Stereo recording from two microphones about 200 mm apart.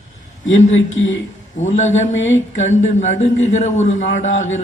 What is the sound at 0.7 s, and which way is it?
Speech, 70° left (ahead or behind).